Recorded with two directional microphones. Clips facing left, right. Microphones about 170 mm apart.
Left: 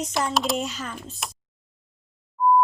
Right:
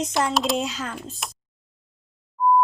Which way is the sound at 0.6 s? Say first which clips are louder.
Right 2 dB; 90° right.